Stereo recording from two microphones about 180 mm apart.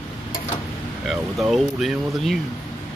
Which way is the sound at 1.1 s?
Centre (ahead or behind).